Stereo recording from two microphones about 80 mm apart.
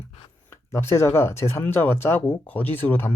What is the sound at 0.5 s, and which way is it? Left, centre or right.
Speech, left.